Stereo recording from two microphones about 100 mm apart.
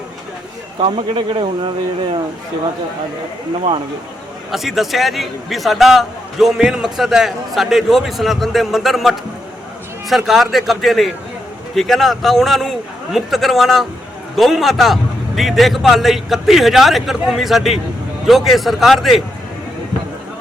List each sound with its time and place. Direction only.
0.9 s speech: 65° right (ahead or behind)
4.5 s a man's voice: centre (ahead or behind)